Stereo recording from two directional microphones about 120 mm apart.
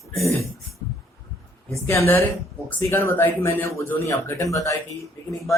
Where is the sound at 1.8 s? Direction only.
20° left (ahead or behind).